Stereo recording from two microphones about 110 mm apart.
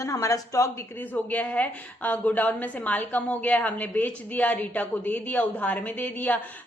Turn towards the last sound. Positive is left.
turn(degrees=15)  # may be behind; listen again after turning